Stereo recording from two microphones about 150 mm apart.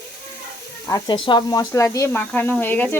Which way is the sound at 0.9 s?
25° left (ahead or behind).